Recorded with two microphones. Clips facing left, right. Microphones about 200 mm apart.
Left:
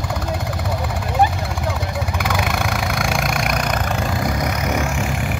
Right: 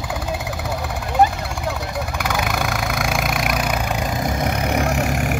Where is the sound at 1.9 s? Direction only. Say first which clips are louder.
Left 1 dB; centre (ahead or behind); by 5.4 s 45° right (ahead or behind).